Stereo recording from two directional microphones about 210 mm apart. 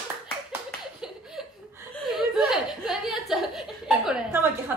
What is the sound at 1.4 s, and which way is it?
Chuckle, centre (ahead or behind).